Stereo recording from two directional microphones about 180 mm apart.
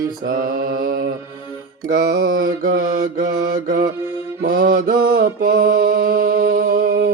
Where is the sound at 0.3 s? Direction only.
50° right (ahead or behind).